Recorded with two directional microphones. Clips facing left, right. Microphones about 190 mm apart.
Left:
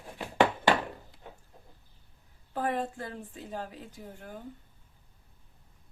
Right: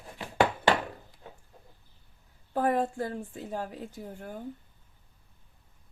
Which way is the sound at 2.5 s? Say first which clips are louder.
Right 5 dB; 45° right (ahead or behind).